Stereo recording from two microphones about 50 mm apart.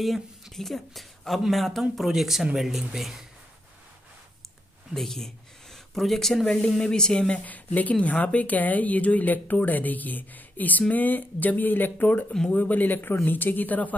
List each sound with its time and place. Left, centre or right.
0.0 s speech: centre
4.9 s speech: centre; by 13.9 s left